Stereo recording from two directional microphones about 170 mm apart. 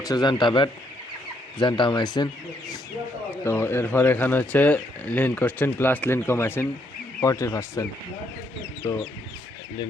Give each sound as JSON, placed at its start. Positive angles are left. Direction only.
{"t": 0.0, "sound": "speech", "side_deg": 25}